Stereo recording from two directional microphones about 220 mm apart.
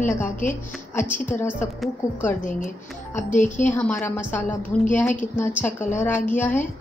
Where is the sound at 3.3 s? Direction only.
35° left (ahead or behind).